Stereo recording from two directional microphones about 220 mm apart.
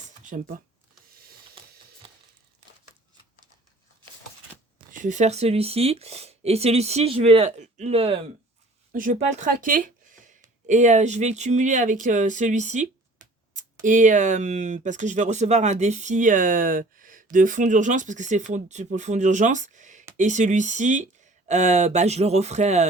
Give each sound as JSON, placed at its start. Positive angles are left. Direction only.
{"t": 0.3, "sound": "speech", "side_deg": -35}
{"t": 2.0, "sound": "a sound", "side_deg": -25}
{"t": 4.9, "sound": "speech", "side_deg": -35}